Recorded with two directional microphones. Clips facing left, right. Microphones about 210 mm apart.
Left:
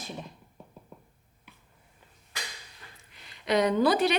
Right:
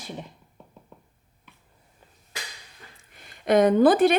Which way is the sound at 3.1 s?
50° right (ahead or behind).